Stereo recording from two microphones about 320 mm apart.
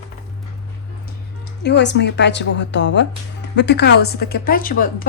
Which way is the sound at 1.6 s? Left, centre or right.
Left.